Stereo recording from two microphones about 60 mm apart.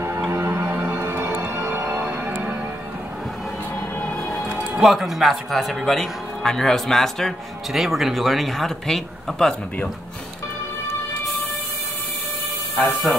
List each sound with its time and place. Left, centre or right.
0.3 s music: right
4.7 s a man's voice: centre
7.7 s a man's voice: centre
12.7 s a man's voice: centre